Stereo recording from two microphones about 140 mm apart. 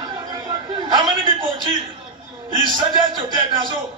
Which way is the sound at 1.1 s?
35° right (ahead or behind).